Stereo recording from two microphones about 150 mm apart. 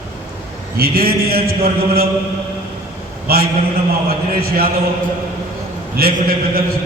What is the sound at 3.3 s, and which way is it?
A man's voice, 90° right.